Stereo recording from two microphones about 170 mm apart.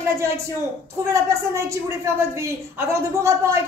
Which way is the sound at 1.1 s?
15° right (ahead or behind).